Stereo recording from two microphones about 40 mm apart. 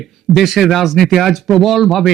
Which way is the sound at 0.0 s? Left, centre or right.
Centre.